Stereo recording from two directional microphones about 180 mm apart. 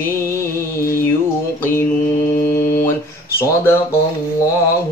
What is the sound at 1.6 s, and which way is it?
Mantra, 15° left (ahead or behind).